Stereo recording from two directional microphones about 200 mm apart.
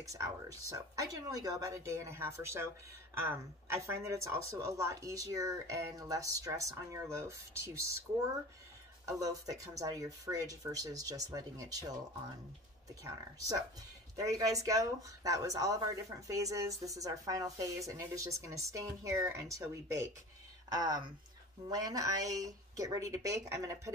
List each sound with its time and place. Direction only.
0.0 s speech: 15° right (ahead or behind)
9.0 s speech: 15° right (ahead or behind)
13.0 s speech: 15° right (ahead or behind)